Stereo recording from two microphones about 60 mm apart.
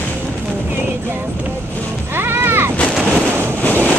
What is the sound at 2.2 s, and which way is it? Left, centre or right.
Music, right.